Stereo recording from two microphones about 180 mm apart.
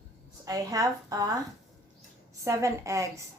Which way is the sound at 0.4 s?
20° right (ahead or behind).